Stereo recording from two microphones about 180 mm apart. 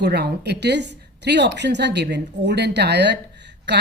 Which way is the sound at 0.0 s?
65° right (ahead or behind).